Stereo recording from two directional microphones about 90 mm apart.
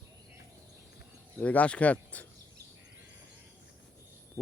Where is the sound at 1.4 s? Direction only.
15° left (ahead or behind).